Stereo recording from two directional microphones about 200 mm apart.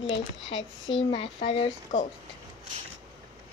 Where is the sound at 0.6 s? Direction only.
70° left (ahead or behind).